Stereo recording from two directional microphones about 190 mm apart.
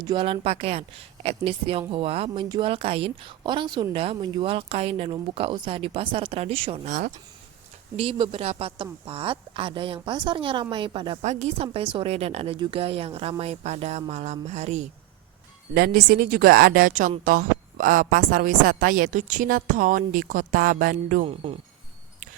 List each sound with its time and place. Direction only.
0.0 s speech: 25° right (ahead or behind)
7.9 s speech: 30° right (ahead or behind)
11.2 s speech: 40° right (ahead or behind)
15.7 s speech: 50° right (ahead or behind)
21.2 s speech: 30° right (ahead or behind)